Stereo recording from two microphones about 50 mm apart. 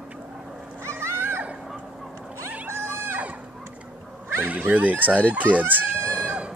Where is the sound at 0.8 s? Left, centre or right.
Right.